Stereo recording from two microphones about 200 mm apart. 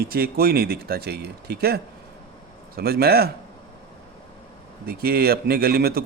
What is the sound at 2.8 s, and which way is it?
Speech, 50° right (ahead or behind).